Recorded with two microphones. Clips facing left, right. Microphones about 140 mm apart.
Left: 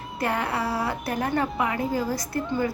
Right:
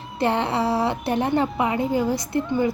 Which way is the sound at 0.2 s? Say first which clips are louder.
Right 5 dB; 25° right (ahead or behind).